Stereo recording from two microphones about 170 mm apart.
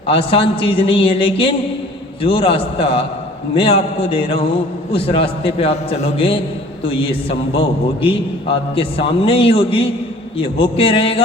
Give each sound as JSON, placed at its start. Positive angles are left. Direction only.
{"t": 0.1, "sound": "a man's voice", "side_deg": 35}